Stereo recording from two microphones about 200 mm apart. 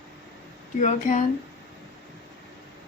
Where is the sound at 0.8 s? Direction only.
35° left (ahead or behind).